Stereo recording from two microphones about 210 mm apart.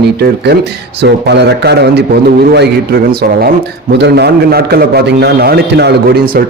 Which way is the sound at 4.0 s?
50° right (ahead or behind).